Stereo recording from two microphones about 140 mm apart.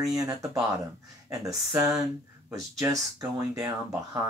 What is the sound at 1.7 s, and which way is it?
Speech, 25° right (ahead or behind).